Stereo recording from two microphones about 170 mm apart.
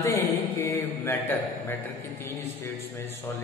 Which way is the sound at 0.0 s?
20° left (ahead or behind).